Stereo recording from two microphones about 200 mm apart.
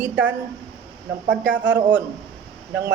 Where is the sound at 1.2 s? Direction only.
65° right (ahead or behind).